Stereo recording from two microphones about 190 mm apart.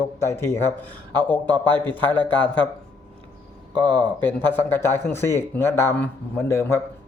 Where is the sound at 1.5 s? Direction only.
25° right (ahead or behind).